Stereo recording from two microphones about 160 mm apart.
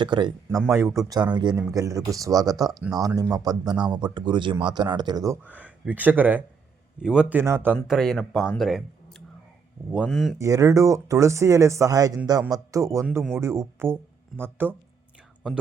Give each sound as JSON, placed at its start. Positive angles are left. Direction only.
{"t": 0.0, "sound": "speech", "side_deg": -30}
{"t": 0.7, "sound": "speech", "side_deg": -20}
{"t": 5.4, "sound": "speech", "side_deg": -10}
{"t": 7.9, "sound": "speech", "side_deg": 0}
{"t": 10.3, "sound": "speech", "side_deg": -20}